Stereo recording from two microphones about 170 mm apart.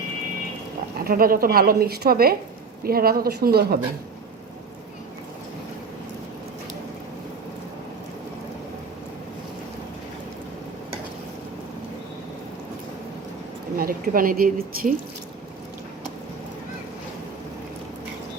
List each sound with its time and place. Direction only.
1.0 s a woman's voice: 60° right (ahead or behind)
13.7 s a woman's voice: 60° right (ahead or behind)